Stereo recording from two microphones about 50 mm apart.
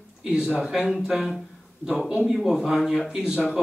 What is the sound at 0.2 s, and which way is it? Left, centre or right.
Speech, centre.